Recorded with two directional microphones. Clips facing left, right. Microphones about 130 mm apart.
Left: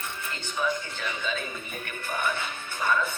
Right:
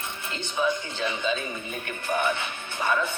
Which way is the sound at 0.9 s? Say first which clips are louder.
Right 5 dB; 20° right (ahead or behind).